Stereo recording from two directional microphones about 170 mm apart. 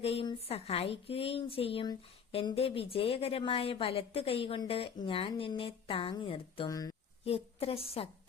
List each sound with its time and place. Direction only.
0.0 s speech: 35° left (ahead or behind)
6.7 s speech: 20° left (ahead or behind)
7.3 s speech: 35° left (ahead or behind)